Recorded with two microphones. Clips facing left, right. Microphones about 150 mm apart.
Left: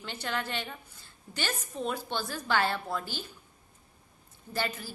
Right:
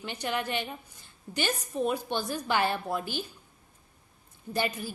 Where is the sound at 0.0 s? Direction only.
15° right (ahead or behind).